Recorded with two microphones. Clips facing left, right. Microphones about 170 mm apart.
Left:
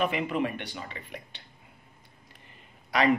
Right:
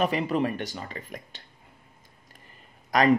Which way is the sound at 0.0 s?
40° right (ahead or behind).